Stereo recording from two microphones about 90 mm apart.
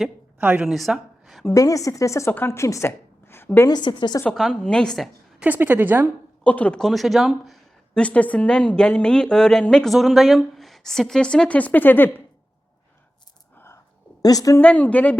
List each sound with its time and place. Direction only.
0.3 s a woman's voice: 20° right (ahead or behind)
0.7 s a sound: centre (ahead or behind)
1.5 s a woman's voice: 40° left (ahead or behind)
3.7 s a woman's voice: 55° left (ahead or behind)
4.3 s a woman's voice: 5° left (ahead or behind)
5.4 s a woman's voice: 20° right (ahead or behind)
6.4 s speech: 15° left (ahead or behind)
7.9 s a woman's voice: 15° left (ahead or behind)
14.2 s a woman's voice: 45° left (ahead or behind)
14.6 s a woman's voice: 15° left (ahead or behind)